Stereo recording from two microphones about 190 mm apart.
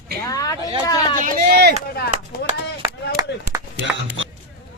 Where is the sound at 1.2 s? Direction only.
45° right (ahead or behind).